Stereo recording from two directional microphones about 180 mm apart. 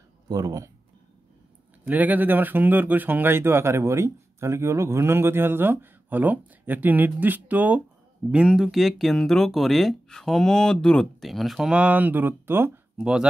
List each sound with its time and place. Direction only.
0.3 s speech: 20° right (ahead or behind)
1.9 s speech: 10° right (ahead or behind)